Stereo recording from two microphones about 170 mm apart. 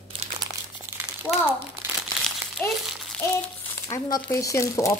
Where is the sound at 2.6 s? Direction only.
10° left (ahead or behind).